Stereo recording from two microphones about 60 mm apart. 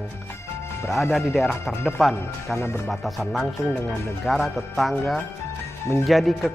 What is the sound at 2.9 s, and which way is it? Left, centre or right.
Speech, centre.